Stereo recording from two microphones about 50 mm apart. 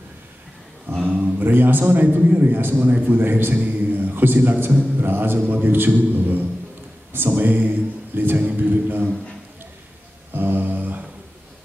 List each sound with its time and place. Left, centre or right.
0.8 s a sound: right
1.4 s a man's voice: right
10.3 s mantra: right